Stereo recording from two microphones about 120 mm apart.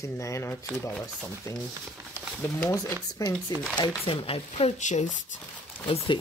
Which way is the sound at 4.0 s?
50° left (ahead or behind).